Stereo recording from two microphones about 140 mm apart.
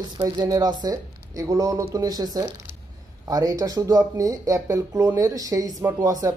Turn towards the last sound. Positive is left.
turn(degrees=-25)  # may be behind; listen again after turning